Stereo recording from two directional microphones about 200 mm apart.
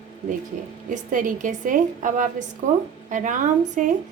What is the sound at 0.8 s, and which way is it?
A woman's voice, 40° right (ahead or behind).